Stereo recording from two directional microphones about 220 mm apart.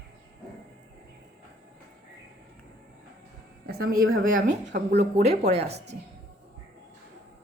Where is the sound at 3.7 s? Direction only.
45° right (ahead or behind).